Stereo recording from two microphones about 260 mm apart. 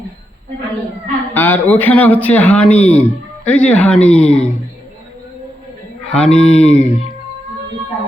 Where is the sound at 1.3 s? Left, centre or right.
Centre.